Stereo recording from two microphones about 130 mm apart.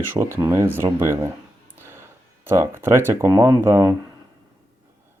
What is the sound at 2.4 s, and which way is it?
Speech, 20° right (ahead or behind).